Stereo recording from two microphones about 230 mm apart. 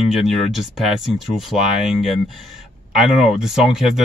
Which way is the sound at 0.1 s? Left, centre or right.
Centre.